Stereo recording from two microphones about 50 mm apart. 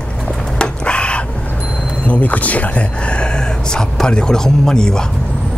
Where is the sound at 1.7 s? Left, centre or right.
Centre.